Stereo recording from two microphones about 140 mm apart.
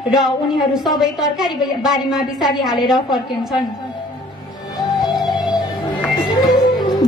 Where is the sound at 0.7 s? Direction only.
Centre (ahead or behind).